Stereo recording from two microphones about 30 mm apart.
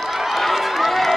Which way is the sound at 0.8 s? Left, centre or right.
Centre.